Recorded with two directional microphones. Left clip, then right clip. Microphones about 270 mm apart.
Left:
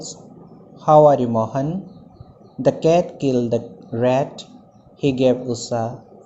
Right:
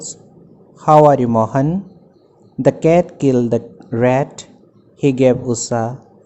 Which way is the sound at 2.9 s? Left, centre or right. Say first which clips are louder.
Right 4 dB; right.